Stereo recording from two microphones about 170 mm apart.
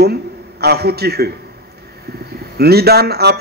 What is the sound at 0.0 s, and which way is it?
A man's voice, 70° right (ahead or behind).